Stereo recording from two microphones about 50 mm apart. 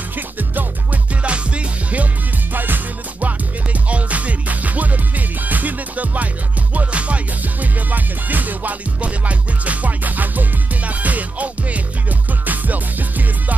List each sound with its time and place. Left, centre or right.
0.1 s music: right
1.2 s music: right
2.5 s music: right